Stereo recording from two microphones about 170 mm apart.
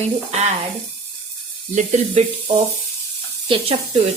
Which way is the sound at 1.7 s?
45° right (ahead or behind).